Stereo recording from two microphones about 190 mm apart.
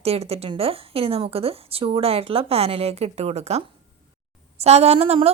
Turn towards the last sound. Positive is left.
turn(degrees=-35)  # may be behind; listen again after turning